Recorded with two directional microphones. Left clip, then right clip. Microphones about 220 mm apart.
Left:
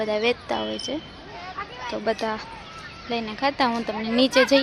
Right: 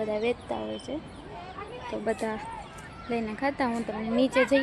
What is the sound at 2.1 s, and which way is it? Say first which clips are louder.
Speech: left 5 dB; centre (ahead or behind).